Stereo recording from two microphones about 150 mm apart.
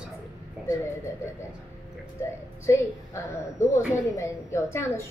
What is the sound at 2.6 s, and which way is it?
A woman's voice, 20° left (ahead or behind).